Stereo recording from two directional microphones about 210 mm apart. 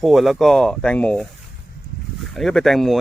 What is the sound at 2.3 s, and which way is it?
Speech, centre (ahead or behind).